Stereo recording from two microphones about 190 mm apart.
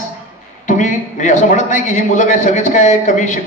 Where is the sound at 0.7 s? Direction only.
40° left (ahead or behind).